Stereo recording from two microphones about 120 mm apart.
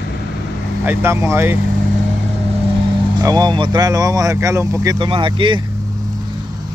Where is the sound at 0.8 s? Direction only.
20° right (ahead or behind).